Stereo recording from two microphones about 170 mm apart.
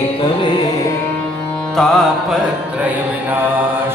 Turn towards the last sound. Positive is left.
turn(degrees=0)  # may be behind; listen again after turning